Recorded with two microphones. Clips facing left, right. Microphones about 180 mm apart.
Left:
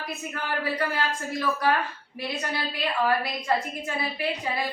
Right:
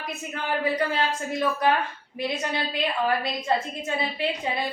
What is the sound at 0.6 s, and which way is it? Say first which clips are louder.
A woman's voice: right 3 dB; 20° right (ahead or behind).